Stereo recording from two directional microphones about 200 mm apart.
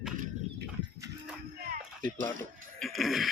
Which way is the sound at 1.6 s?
40° right (ahead or behind).